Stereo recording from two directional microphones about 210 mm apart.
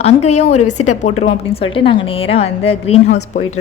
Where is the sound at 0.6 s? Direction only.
90° left.